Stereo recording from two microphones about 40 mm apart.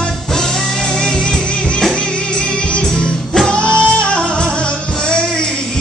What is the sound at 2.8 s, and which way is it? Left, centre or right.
Music, centre.